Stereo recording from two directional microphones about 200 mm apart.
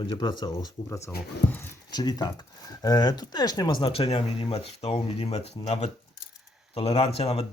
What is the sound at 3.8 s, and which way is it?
Speech, 30° left (ahead or behind).